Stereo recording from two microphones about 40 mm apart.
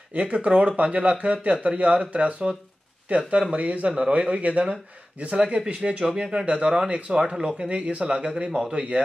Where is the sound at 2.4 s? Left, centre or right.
Right.